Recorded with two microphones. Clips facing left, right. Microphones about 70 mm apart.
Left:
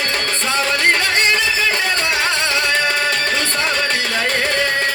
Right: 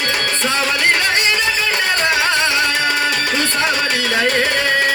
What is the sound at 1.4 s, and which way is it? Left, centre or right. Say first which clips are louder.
Music: even; right.